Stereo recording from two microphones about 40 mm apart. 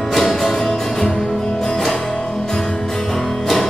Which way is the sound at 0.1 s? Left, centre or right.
Centre.